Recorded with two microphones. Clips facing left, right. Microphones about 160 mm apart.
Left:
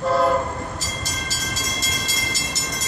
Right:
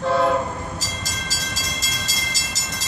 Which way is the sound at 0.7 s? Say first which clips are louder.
Left 1 dB; 90° right.